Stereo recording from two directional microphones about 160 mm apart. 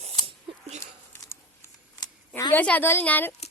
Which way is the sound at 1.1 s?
15° left (ahead or behind).